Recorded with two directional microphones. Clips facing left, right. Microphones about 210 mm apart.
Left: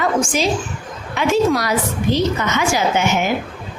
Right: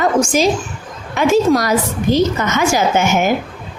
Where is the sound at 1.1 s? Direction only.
45° right (ahead or behind).